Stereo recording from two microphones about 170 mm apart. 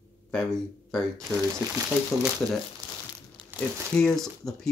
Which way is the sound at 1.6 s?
20° right (ahead or behind).